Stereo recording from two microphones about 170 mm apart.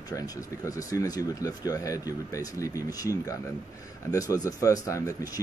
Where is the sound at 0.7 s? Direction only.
20° left (ahead or behind).